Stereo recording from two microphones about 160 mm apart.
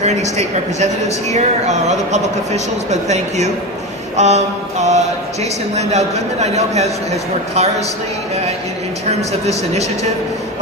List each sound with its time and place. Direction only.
0.0 s a woman's voice: 45° right (ahead or behind)
9.0 s a woman's voice: 40° right (ahead or behind)